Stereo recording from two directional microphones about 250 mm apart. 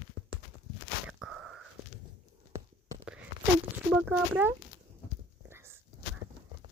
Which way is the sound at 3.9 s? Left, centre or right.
Centre.